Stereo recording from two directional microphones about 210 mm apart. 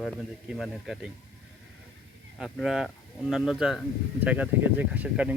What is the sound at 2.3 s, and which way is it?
Speech, centre (ahead or behind).